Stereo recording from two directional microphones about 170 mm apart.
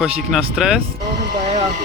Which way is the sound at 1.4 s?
40° right (ahead or behind).